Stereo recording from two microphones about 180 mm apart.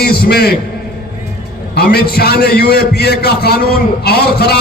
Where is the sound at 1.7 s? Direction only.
60° left (ahead or behind).